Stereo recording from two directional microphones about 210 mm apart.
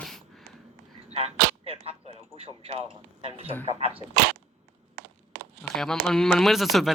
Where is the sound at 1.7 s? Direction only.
30° right (ahead or behind).